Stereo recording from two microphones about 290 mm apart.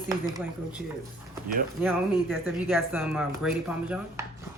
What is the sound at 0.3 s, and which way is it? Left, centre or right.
Speech, centre.